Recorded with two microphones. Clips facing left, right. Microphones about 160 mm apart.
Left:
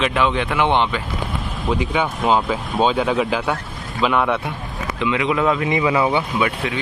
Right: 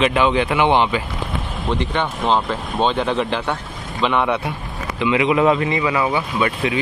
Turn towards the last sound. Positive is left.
turn(degrees=0)  # may be behind; listen again after turning